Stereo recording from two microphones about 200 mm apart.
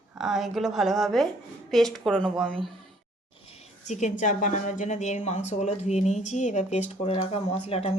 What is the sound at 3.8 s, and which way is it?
A woman's voice, 35° left (ahead or behind).